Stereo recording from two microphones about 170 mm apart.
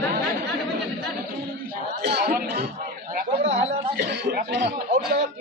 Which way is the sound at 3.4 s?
35° right (ahead or behind).